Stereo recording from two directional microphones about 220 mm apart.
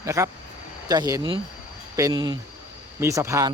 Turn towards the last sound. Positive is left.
turn(degrees=-15)  # may be behind; listen again after turning